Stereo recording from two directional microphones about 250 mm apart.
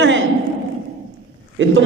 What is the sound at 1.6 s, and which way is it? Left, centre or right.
Speech, right.